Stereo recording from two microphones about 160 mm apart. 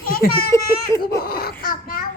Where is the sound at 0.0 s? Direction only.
65° left (ahead or behind).